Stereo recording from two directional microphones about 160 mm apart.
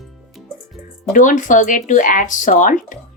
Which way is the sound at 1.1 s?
55° left (ahead or behind).